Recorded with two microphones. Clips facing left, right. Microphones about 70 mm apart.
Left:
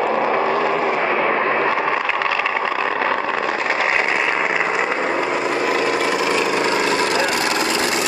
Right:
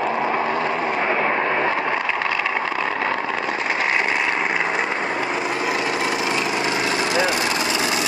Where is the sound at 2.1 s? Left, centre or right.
Left.